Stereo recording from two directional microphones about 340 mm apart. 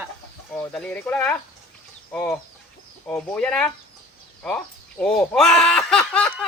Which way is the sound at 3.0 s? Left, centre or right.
Centre.